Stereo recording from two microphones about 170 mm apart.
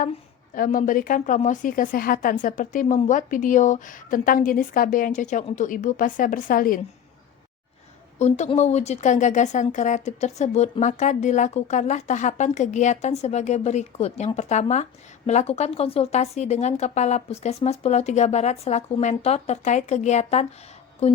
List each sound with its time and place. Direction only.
0.0 s speech: 55° left (ahead or behind)
8.2 s speech: 40° left (ahead or behind)